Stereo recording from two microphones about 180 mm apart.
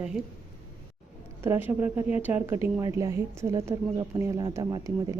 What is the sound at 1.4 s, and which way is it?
Speech, 10° right (ahead or behind).